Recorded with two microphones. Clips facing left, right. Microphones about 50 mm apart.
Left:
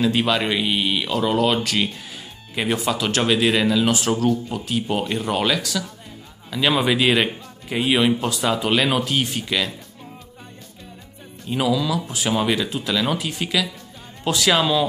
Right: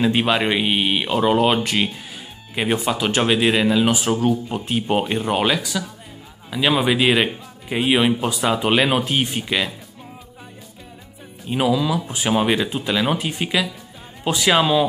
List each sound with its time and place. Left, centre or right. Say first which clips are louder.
0.0 s speech: right 1 dB; right
4.5 s speech: right 2 dB; right
11.4 s speech: right 2 dB; centre